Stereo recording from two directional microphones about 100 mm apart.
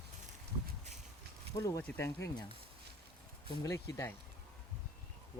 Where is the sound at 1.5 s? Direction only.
30° left (ahead or behind).